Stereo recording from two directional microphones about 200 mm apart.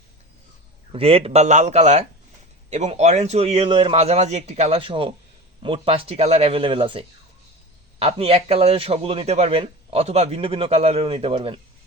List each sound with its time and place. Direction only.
0.9 s a man's voice: 30° right (ahead or behind)